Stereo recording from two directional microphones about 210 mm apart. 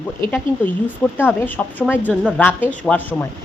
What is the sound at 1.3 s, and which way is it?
A woman's voice, 10° left (ahead or behind).